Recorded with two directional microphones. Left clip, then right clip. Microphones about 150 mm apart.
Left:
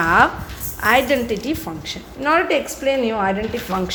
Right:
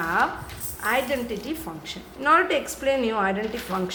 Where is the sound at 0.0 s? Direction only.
55° left (ahead or behind).